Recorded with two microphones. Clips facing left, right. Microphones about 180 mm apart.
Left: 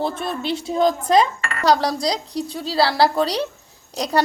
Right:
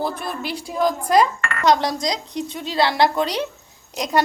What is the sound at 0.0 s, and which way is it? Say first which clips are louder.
A woman's voice: left 2 dB; 25° left (ahead or behind).